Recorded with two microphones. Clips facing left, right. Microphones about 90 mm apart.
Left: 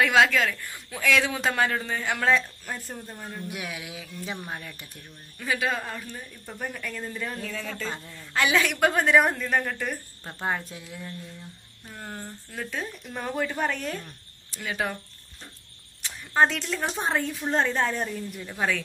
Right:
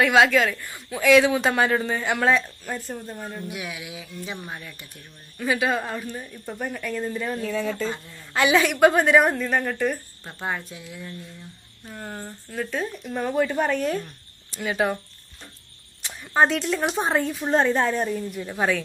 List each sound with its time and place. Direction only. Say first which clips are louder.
0.0 s speech: right 3 dB; 5° right (ahead or behind)
3.5 s speech: right 2 dB; 45° left (ahead or behind)
5.4 s speech: right 4 dB; 15° right (ahead or behind)
6.6 s speech: right 5 dB; 5° right (ahead or behind)
10.4 s speech: even; 30° left (ahead or behind)
11.9 s speech: right 3 dB; 5° right (ahead or behind)
14.5 s speech: right 6 dB; 20° right (ahead or behind)
16.0 s speech: right 2 dB; 15° right (ahead or behind)
18.5 s speech: right 4 dB; 25° right (ahead or behind)